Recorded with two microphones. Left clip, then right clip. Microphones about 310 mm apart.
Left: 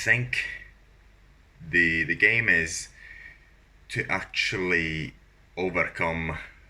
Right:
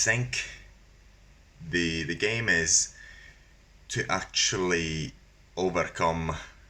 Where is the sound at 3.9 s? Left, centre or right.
Centre.